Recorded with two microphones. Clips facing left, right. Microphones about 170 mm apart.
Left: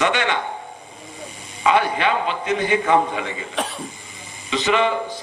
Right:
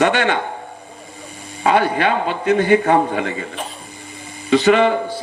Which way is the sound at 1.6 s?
55° right (ahead or behind).